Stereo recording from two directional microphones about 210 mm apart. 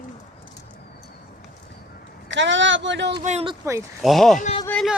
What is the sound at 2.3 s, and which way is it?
Speech, 60° right (ahead or behind).